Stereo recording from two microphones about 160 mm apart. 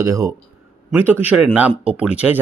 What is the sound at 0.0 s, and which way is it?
Speech, 20° right (ahead or behind).